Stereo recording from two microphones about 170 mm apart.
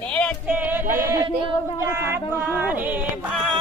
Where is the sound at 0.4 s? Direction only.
10° right (ahead or behind).